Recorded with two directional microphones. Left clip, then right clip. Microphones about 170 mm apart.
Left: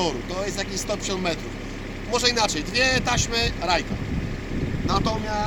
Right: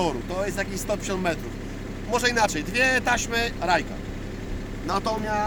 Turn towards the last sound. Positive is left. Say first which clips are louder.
# left 1 dB
turn(degrees=-5)  # may be behind; listen again after turning